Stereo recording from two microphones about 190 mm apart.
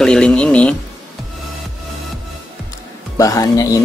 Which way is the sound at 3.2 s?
20° left (ahead or behind).